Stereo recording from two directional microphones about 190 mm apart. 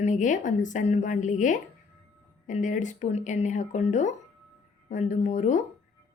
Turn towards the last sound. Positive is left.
turn(degrees=40)  # may be behind; listen again after turning